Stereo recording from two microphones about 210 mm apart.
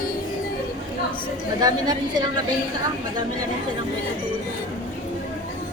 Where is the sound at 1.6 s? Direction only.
20° right (ahead or behind).